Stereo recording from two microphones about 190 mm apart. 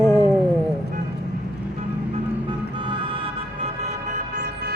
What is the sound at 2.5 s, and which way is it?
Music, 25° right (ahead or behind).